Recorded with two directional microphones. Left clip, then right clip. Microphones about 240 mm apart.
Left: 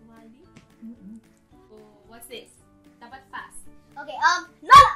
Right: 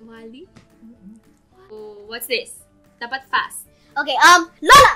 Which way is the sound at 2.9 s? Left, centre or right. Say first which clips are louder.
Right 17 dB; right.